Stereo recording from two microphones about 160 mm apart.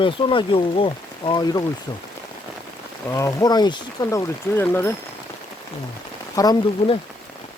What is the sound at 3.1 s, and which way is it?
Speech, 20° left (ahead or behind).